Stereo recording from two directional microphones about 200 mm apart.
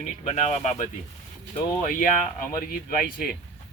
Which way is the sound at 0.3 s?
35° left (ahead or behind).